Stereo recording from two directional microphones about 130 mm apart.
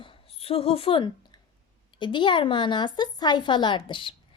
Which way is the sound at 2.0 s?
40° left (ahead or behind).